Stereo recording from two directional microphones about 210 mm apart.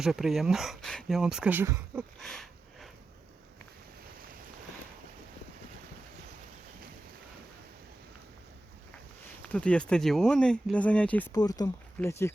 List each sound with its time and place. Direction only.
0.0 s speech: centre (ahead or behind)
2.2 s a sound: centre (ahead or behind)
9.5 s speech: 5° left (ahead or behind)
11.3 s speech: 20° left (ahead or behind)